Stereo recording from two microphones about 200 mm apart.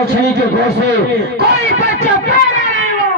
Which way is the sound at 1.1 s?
55° right (ahead or behind).